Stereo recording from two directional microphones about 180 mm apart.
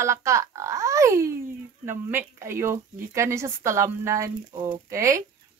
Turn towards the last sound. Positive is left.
turn(degrees=-15)  # may be behind; listen again after turning